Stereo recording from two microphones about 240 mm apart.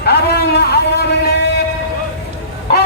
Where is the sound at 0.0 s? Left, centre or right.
Left.